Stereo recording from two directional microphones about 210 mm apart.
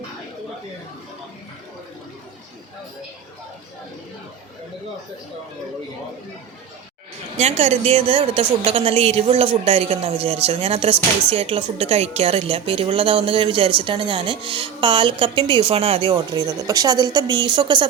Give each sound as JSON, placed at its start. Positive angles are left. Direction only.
{"t": 7.3, "sound": "speech", "side_deg": -30}